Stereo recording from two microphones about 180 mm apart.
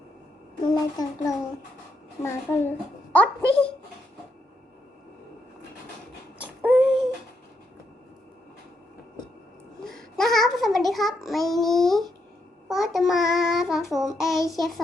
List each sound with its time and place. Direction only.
0.7 s child singing: 20° left (ahead or behind)
2.2 s a child's voice: 15° left (ahead or behind)
6.4 s babbling: 10° right (ahead or behind)
9.8 s child singing: centre (ahead or behind)